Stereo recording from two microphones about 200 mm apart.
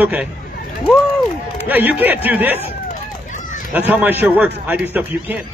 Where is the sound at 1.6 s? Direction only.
10° right (ahead or behind).